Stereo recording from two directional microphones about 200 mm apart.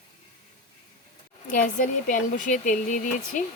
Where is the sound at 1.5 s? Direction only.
40° left (ahead or behind).